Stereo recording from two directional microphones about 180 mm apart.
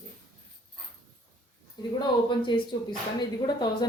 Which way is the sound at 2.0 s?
25° left (ahead or behind).